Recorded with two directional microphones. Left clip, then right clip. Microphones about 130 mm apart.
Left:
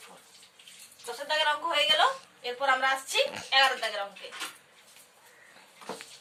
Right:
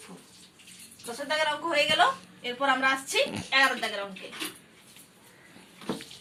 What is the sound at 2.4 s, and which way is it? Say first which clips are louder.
Speech: right 1 dB; 25° left (ahead or behind).